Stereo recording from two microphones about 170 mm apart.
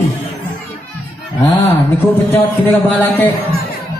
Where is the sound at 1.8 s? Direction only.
15° left (ahead or behind).